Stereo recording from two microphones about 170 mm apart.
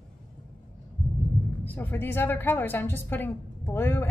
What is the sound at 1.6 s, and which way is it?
A woman's voice, 10° left (ahead or behind).